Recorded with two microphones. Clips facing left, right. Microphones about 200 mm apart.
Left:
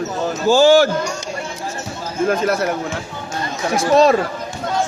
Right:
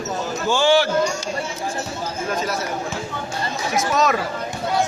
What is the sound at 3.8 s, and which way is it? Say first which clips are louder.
Speech: left 8 dB; 30° left (ahead or behind).